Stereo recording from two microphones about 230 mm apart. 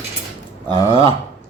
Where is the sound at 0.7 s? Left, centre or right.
Right.